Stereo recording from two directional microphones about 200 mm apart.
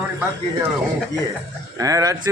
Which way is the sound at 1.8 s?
15° right (ahead or behind).